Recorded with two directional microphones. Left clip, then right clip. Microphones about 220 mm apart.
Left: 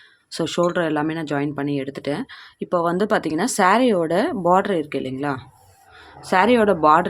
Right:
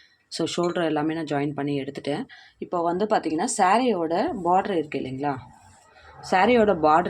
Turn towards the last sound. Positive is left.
turn(degrees=20)  # may be behind; listen again after turning